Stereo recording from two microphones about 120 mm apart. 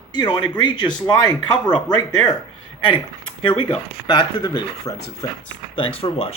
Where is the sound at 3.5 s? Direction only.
40° left (ahead or behind).